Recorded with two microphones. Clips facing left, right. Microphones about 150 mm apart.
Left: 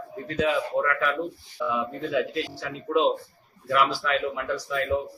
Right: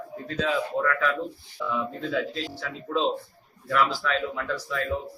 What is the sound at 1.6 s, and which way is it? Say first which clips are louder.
Speech: left 1 dB; 15° left (ahead or behind).